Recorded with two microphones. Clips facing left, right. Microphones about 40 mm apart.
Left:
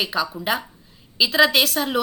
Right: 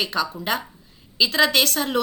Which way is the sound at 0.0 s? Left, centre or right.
Centre.